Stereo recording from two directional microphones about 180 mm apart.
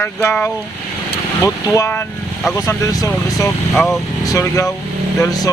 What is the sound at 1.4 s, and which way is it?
Speech, 20° left (ahead or behind).